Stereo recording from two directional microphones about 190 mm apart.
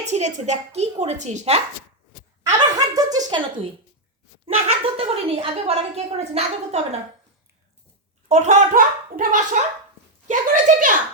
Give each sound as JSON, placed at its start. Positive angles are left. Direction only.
{"t": 0.0, "sound": "a woman's voice", "side_deg": -35}
{"t": 2.5, "sound": "chuckle", "side_deg": -20}
{"t": 4.4, "sound": "a woman's voice", "side_deg": -35}
{"t": 8.3, "sound": "a child's voice", "side_deg": -40}